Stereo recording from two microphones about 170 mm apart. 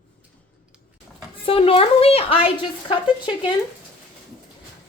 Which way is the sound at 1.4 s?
35° left (ahead or behind).